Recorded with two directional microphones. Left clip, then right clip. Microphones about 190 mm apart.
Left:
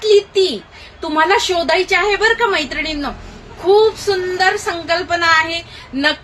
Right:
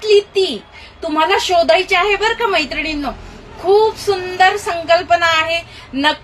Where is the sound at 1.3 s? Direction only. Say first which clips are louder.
Right 5 dB; 20° left (ahead or behind).